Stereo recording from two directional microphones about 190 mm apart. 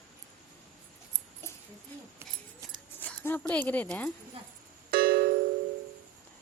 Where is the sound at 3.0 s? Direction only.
10° left (ahead or behind).